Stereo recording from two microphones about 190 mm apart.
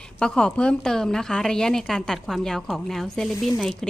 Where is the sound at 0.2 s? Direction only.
5° left (ahead or behind).